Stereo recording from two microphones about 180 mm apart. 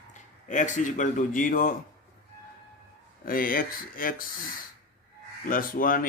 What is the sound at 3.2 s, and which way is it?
Speech, 50° left (ahead or behind).